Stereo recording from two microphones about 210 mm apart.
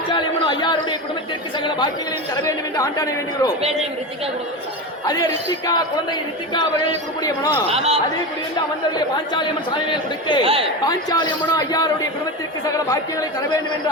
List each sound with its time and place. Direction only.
0.1 s a sound: 20° left (ahead or behind)
1.5 s a man's voice: 20° left (ahead or behind)
3.6 s speech: 30° right (ahead or behind)
5.6 s a man's voice: 20° left (ahead or behind)
7.7 s speech: 30° right (ahead or behind)
9.0 s a man's voice: 20° left (ahead or behind)
10.4 s speech: 25° right (ahead or behind)
10.8 s speech: 20° left (ahead or behind)